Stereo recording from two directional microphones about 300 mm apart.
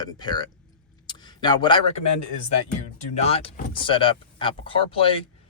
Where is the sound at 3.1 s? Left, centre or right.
Centre.